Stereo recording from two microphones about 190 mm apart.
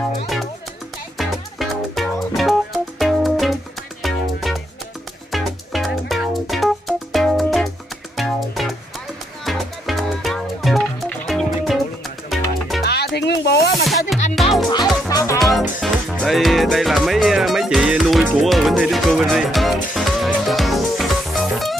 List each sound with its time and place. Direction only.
1.1 s music: centre (ahead or behind)
12.8 s music: 60° left (ahead or behind)
13.8 s music: centre (ahead or behind)
14.7 s music: 20° left (ahead or behind)
15.3 s music: centre (ahead or behind)